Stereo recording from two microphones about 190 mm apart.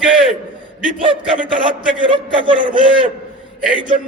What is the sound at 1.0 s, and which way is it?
A man's voice, 25° right (ahead or behind).